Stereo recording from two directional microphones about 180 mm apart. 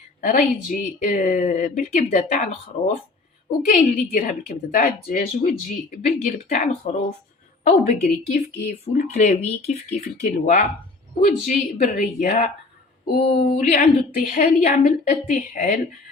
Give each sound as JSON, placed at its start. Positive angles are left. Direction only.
{"t": 0.2, "sound": "a woman's voice", "side_deg": 45}